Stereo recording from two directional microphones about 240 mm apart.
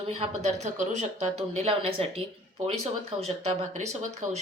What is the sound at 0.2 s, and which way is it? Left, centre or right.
Speech, right.